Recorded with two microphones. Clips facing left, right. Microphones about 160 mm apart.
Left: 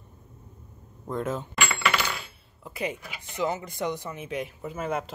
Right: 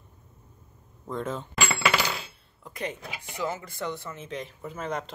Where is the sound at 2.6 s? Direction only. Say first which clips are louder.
Left 3 dB; 5° left (ahead or behind).